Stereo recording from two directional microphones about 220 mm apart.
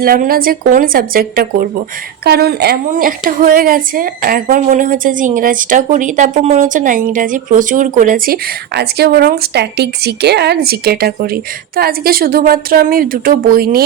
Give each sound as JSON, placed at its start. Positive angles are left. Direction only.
{"t": 0.0, "sound": "a woman's voice", "side_deg": -40}